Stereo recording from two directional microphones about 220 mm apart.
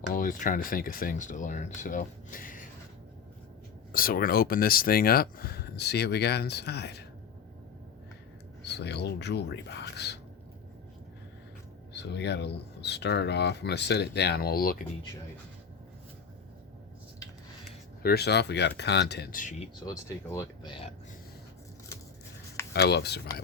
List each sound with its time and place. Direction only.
0.1 s speech: 40° left (ahead or behind)
3.9 s speech: 40° left (ahead or behind)
8.6 s speech: 50° left (ahead or behind)
11.9 s speech: 50° left (ahead or behind)
18.0 s speech: 45° left (ahead or behind)
19.8 s speech: 15° left (ahead or behind)
22.7 s speech: 50° left (ahead or behind)